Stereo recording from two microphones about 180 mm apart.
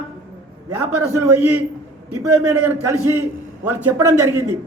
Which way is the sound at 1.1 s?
10° right (ahead or behind).